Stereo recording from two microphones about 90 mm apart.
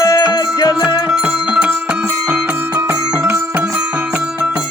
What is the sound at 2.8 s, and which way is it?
Music, 25° right (ahead or behind).